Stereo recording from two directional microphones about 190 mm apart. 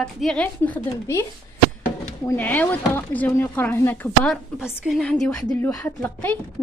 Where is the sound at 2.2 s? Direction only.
10° left (ahead or behind).